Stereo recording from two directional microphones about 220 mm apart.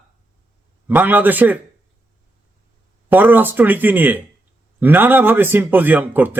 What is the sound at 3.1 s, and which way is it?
Speech, 10° right (ahead or behind).